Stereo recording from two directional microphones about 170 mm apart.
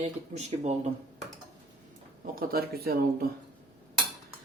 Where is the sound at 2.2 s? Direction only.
55° right (ahead or behind).